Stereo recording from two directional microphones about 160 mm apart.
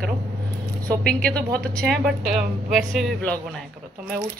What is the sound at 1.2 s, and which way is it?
Speech, 70° right (ahead or behind).